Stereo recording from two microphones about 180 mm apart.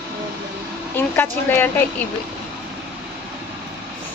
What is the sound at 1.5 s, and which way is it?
Speech, 10° left (ahead or behind).